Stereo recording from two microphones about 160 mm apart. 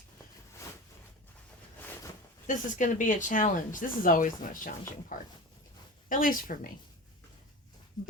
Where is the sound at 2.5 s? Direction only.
55° left (ahead or behind).